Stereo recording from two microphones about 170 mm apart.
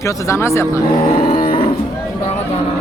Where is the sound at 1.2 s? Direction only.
55° left (ahead or behind).